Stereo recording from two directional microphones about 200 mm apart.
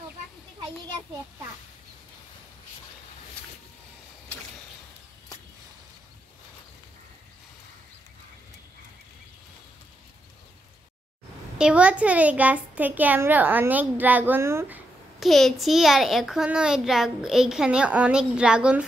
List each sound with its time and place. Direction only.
11.5 s a child's voice: 5° right (ahead or behind)
15.1 s a child's voice: centre (ahead or behind)